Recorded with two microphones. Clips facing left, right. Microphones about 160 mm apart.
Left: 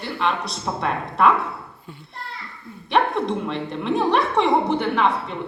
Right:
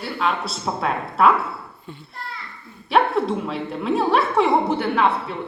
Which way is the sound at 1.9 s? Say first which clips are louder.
Right 4 dB; 5° left (ahead or behind).